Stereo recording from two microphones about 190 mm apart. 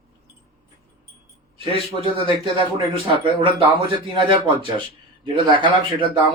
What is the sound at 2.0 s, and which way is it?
Speech, 30° right (ahead or behind).